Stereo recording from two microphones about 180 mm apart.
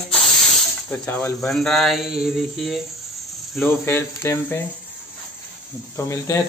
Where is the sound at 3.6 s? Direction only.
15° left (ahead or behind).